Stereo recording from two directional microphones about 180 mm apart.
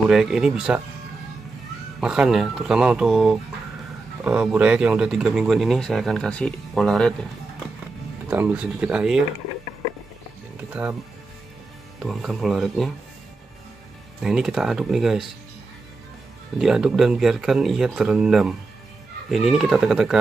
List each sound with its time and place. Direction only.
0.1 s speech: 5° right (ahead or behind)
2.0 s speech: 5° right (ahead or behind)
8.3 s speech: 10° right (ahead or behind)
10.7 s speech: 10° right (ahead or behind)
12.0 s speech: centre (ahead or behind)
14.2 s speech: centre (ahead or behind)
16.5 s speech: 5° right (ahead or behind)